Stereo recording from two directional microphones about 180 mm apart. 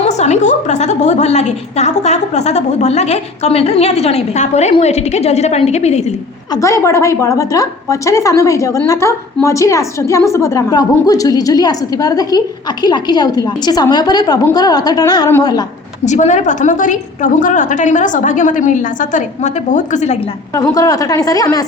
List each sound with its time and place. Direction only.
0.0 s a woman's voice: 40° left (ahead or behind)
6.5 s a woman's voice: 15° left (ahead or behind)
16.0 s a woman's voice: 40° left (ahead or behind)
20.6 s a woman's voice: 20° left (ahead or behind)